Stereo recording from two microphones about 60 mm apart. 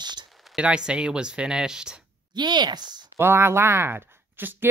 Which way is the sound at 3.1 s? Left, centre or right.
Right.